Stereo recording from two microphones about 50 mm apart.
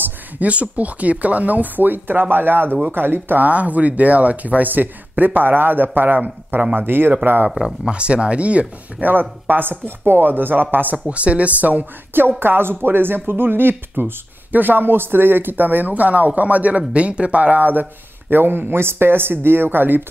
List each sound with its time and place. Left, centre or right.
0.0 s speech: right
3.4 s speech: right
7.8 s speech: right
9.1 s speech: right